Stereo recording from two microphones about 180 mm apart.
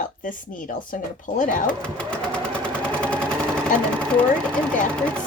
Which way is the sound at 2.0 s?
5° left (ahead or behind).